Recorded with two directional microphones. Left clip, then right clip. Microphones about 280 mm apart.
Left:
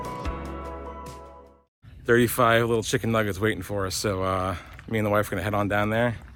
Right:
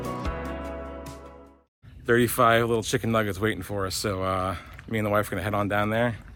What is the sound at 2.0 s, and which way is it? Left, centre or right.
Speech, centre.